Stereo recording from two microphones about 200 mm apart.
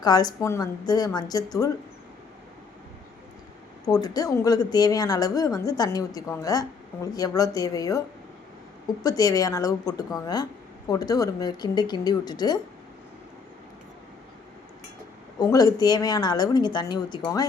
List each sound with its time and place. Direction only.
0.0 s speech: 20° left (ahead or behind)
3.8 s a woman's voice: 20° left (ahead or behind)
9.0 s a woman's voice: 20° left (ahead or behind)
15.4 s speech: 20° left (ahead or behind)